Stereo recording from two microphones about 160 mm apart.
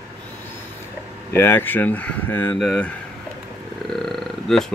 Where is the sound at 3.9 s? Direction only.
Centre (ahead or behind).